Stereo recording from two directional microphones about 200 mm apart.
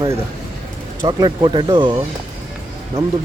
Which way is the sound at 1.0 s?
20° right (ahead or behind).